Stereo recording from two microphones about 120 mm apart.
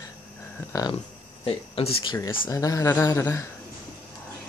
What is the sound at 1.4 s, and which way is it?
Speech, 50° left (ahead or behind).